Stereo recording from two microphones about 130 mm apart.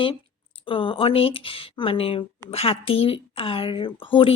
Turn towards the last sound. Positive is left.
turn(degrees=40)  # may be behind; listen again after turning